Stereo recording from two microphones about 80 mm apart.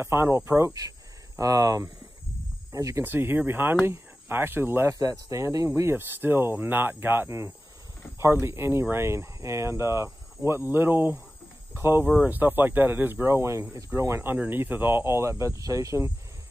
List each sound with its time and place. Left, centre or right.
0.0 s speech: right
1.4 s speech: right
3.0 s speech: right
4.9 s speech: right
5.7 s speech: right
14.3 s speech: right